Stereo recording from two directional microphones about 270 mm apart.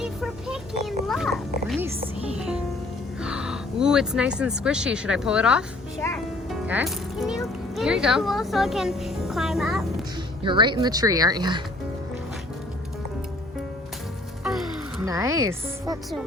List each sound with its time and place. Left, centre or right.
0.0 s a sound: centre
2.4 s music: centre
3.2 s a sound: centre
4.4 s speech: centre
6.5 s music: centre
7.8 s speech: centre
10.4 s speech: centre
14.4 s music: centre
15.0 s speech: centre